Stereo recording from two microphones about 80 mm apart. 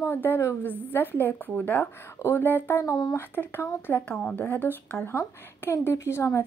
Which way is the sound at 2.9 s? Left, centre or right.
Left.